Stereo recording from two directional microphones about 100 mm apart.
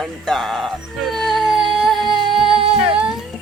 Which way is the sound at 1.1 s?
Centre (ahead or behind).